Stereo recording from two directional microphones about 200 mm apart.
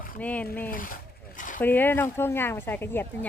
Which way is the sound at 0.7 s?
40° left (ahead or behind).